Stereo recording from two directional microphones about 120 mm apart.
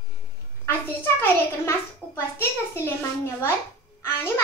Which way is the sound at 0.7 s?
20° left (ahead or behind).